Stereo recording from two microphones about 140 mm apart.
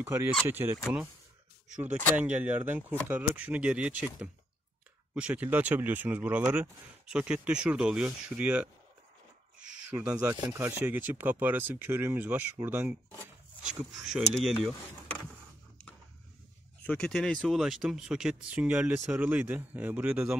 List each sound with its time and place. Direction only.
0.0 s speech: 15° right (ahead or behind)
2.1 s speech: 10° right (ahead or behind)
9.8 s speech: 10° right (ahead or behind)
10.1 s speech: 25° right (ahead or behind)
13.9 s speech: centre (ahead or behind)
16.8 s speech: 5° left (ahead or behind); by 20.3 s 15° right (ahead or behind)